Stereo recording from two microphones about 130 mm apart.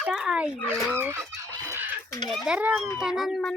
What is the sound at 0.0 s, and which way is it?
Speech, 5° right (ahead or behind).